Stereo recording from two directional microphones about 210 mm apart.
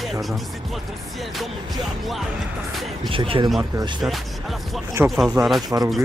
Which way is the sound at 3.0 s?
25° right (ahead or behind).